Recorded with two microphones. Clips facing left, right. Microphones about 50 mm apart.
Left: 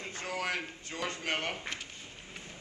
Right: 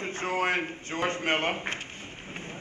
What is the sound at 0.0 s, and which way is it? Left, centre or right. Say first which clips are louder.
A man's voice: right 8 dB; right.